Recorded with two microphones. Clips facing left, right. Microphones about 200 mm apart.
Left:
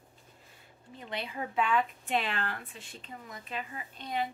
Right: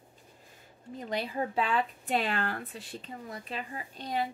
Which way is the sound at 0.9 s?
40° right (ahead or behind).